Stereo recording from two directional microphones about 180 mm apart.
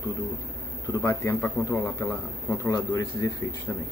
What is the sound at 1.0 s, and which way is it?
A man's voice, 10° left (ahead or behind).